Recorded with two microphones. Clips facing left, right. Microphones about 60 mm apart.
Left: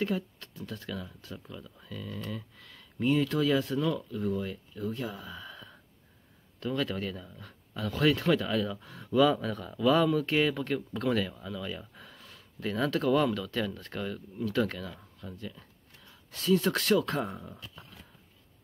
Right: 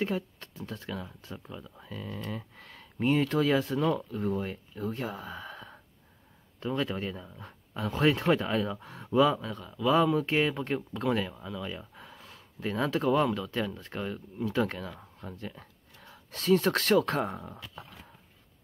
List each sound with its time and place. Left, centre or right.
0.0 s speech: right
2.0 s speech: right
6.6 s speech: right
9.4 s speech: centre
10.1 s speech: right
10.9 s speech: centre
11.1 s speech: centre; by 17.6 s right